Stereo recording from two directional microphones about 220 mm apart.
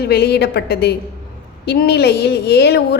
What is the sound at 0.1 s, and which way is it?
A woman's voice, 45° left (ahead or behind).